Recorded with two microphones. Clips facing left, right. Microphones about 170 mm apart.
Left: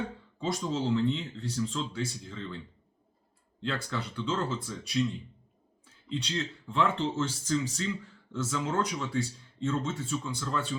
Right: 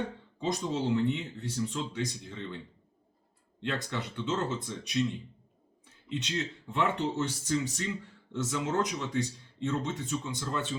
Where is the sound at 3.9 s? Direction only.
20° right (ahead or behind).